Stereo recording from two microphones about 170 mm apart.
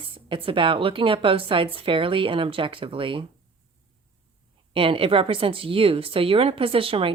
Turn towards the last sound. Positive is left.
turn(degrees=-35)  # may be behind; listen again after turning